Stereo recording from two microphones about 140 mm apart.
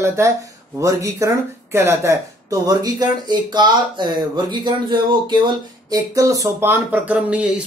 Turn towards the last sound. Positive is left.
turn(degrees=-10)  # may be behind; listen again after turning